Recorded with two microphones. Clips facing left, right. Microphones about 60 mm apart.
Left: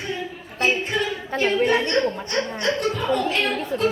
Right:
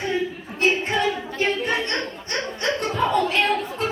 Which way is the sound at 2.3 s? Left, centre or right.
Right.